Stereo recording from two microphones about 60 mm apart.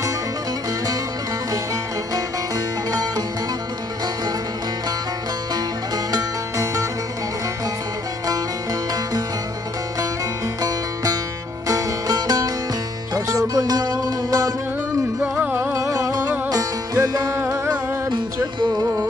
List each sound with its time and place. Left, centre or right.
2.1 s music: right
6.6 s music: right
11.6 s music: right
15.3 s music: right
15.8 s music: right
16.4 s music: right